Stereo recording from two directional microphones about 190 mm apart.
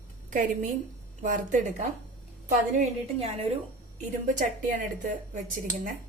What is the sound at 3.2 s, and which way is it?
Speech, 30° right (ahead or behind).